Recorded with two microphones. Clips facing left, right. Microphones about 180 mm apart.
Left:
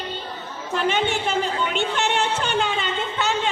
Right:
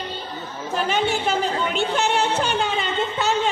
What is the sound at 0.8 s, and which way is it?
Music, 40° right (ahead or behind).